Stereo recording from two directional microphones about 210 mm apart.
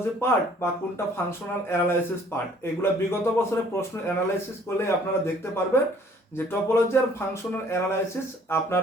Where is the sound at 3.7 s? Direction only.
15° left (ahead or behind).